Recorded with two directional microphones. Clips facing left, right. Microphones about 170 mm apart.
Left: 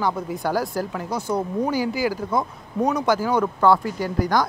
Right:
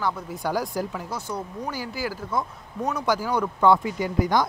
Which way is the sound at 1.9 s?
Centre (ahead or behind).